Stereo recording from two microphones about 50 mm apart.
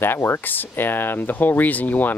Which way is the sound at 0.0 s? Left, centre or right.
Left.